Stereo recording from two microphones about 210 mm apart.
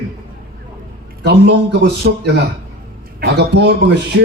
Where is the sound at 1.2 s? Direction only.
55° right (ahead or behind).